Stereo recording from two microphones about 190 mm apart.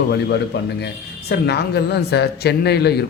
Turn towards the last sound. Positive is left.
turn(degrees=60)  # may be behind; listen again after turning